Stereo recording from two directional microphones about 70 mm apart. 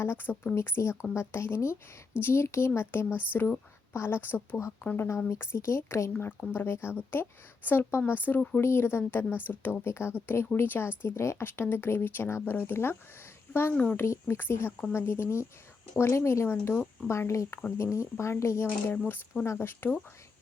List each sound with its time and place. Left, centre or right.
0.0 s a woman's voice: left
16.5 s speech: left
17.2 s speech: left
18.9 s speech: left